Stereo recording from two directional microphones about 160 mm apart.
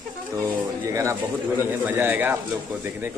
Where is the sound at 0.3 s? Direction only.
20° right (ahead or behind).